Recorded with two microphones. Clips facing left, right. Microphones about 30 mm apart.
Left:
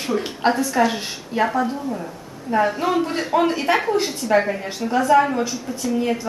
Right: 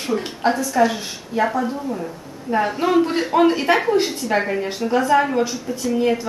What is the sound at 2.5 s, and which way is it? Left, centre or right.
A woman's voice, centre.